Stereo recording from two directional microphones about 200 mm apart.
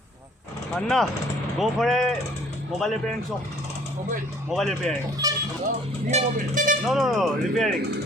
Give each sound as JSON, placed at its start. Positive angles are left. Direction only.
{"t": 0.7, "sound": "speech", "side_deg": 0}
{"t": 4.5, "sound": "speech", "side_deg": 0}
{"t": 5.2, "sound": "goat", "side_deg": -15}
{"t": 6.1, "sound": "speech", "side_deg": -35}
{"t": 6.8, "sound": "speech", "side_deg": 0}